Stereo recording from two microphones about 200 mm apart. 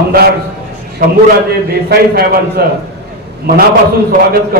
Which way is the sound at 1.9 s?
50° right (ahead or behind).